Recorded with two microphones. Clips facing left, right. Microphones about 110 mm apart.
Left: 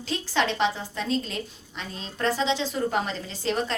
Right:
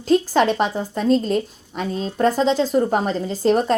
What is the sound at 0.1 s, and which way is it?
A woman's voice, 45° right (ahead or behind).